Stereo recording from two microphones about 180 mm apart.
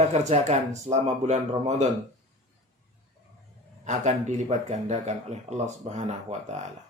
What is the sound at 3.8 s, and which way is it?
A man's voice, 40° right (ahead or behind).